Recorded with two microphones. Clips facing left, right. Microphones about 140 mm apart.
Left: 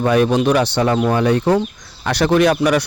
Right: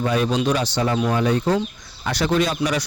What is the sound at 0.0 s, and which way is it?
Speech, 60° left (ahead or behind).